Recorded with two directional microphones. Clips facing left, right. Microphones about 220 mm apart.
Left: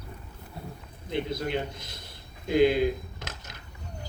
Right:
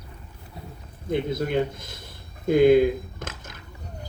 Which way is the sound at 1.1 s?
50° right (ahead or behind).